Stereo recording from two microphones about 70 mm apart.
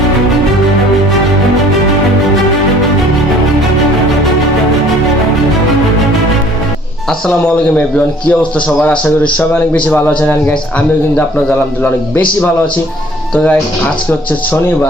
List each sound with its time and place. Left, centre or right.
7.9 s a man's voice: centre
13.3 s a man's voice: centre